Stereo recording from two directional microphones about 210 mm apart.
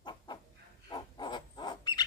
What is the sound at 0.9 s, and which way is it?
Wild animals, 20° left (ahead or behind).